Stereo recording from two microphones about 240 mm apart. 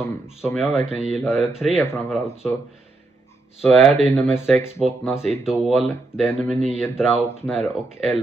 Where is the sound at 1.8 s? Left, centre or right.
Centre.